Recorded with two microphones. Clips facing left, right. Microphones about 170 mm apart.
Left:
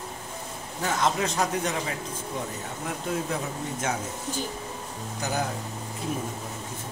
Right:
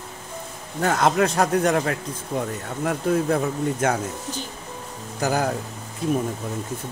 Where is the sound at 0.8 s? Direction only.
55° right (ahead or behind).